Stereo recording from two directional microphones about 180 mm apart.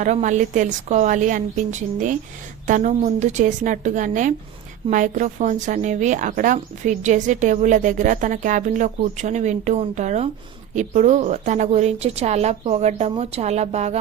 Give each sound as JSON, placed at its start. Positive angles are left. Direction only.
{"t": 0.0, "sound": "a woman's voice", "side_deg": -40}